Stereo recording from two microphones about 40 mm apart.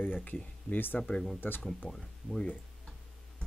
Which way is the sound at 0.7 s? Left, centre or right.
Left.